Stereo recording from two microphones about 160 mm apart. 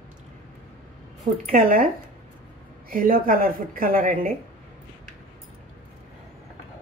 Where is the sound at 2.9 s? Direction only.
60° right (ahead or behind).